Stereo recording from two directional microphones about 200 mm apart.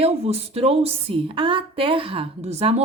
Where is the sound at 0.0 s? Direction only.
30° right (ahead or behind).